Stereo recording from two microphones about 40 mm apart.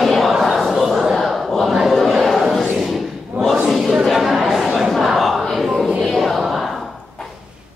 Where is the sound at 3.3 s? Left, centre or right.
Right.